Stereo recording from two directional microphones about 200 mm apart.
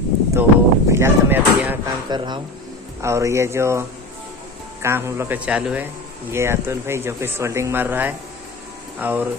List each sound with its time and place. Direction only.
0.3 s a sound: 15° right (ahead or behind)
2.0 s speech: 20° right (ahead or behind)
4.8 s speech: 10° right (ahead or behind)